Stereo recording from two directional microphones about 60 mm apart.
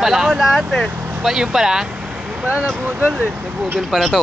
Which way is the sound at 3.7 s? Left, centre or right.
Centre.